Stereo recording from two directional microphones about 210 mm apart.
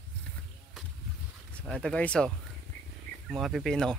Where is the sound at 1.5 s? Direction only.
5° left (ahead or behind).